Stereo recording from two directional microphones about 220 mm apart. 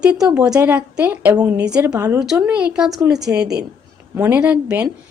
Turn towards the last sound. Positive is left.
turn(degrees=-10)  # may be behind; listen again after turning